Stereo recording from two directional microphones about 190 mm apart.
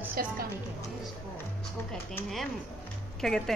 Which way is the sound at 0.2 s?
50° right (ahead or behind).